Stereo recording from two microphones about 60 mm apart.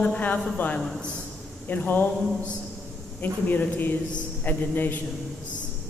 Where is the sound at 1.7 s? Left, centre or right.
Left.